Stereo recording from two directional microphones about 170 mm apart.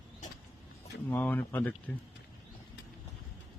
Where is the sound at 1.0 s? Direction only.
10° left (ahead or behind).